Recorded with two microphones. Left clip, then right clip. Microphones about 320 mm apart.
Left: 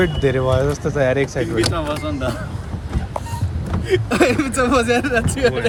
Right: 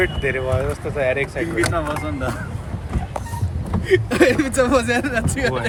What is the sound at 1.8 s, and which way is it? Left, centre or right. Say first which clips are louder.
Speech: left 1 dB; centre.